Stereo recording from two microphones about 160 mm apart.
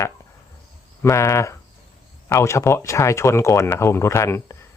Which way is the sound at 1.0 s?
15° left (ahead or behind).